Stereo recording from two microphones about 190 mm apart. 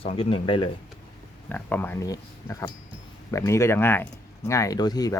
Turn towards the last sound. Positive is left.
turn(degrees=20)  # may be behind; listen again after turning